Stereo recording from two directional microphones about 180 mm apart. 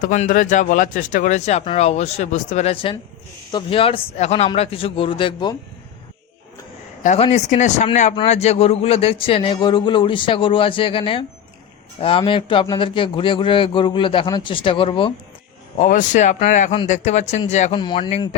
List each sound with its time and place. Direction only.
0.0 s speech: 45° left (ahead or behind); by 5.5 s 25° left (ahead or behind)
7.0 s speech: 40° left (ahead or behind)
15.8 s speech: 45° left (ahead or behind)
17.7 s speech: 25° left (ahead or behind)